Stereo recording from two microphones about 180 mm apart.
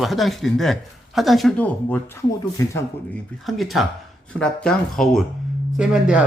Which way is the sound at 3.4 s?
Centre (ahead or behind).